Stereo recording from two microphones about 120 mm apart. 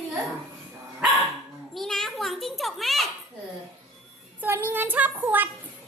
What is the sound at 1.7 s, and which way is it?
Children playing, 5° left (ahead or behind).